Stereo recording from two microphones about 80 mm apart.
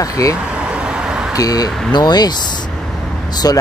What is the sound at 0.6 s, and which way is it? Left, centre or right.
Vehicle, centre.